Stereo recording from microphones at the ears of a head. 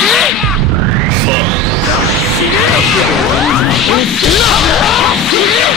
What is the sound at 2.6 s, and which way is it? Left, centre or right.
Whoosh, left.